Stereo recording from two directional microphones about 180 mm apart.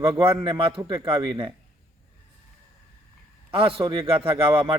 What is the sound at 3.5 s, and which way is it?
A man's voice, 30° right (ahead or behind).